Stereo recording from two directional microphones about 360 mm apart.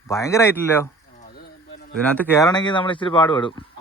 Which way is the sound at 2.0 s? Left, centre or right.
Centre.